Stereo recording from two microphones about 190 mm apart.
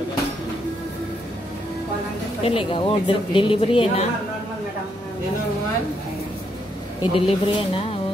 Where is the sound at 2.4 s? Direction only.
30° left (ahead or behind).